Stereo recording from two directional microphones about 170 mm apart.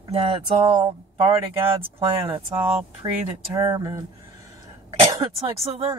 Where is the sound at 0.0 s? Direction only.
35° right (ahead or behind).